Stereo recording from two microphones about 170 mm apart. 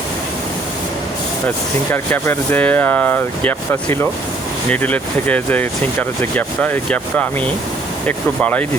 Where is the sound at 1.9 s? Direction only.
10° left (ahead or behind).